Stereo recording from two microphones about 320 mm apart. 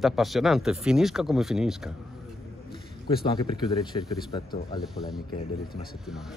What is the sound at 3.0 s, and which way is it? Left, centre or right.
Speech, centre.